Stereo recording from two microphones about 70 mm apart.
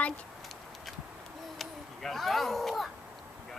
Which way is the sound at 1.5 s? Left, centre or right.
Centre.